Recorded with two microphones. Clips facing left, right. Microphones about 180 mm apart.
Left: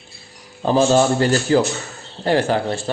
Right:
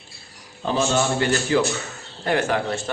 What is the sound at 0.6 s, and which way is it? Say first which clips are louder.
A man's voice: left 7 dB; 35° left (ahead or behind).